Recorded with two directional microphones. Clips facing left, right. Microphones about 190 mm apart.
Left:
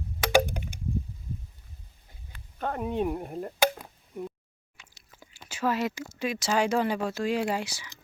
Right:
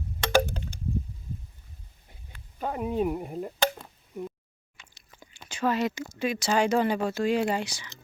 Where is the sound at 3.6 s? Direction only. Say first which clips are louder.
Left 3 dB; 10° left (ahead or behind).